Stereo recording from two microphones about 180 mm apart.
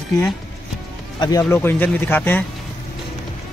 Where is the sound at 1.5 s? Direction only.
10° left (ahead or behind).